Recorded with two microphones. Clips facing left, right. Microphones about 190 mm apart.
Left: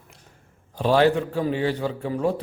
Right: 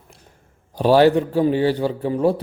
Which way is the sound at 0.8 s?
35° right (ahead or behind).